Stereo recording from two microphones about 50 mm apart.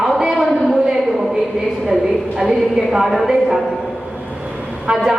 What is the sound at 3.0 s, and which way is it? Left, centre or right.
Speech, centre.